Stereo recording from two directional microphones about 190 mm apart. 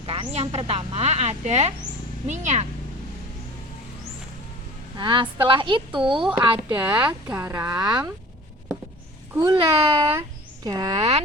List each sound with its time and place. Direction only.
0.0 s speech: 30° right (ahead or behind)
4.9 s a woman's voice: 25° right (ahead or behind)
6.4 s speech: 15° right (ahead or behind)
9.3 s a child's voice: 15° right (ahead or behind)
9.6 s a woman's voice: 30° right (ahead or behind)